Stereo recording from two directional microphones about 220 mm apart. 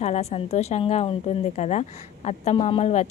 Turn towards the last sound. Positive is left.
turn(degrees=30)  # may be behind; listen again after turning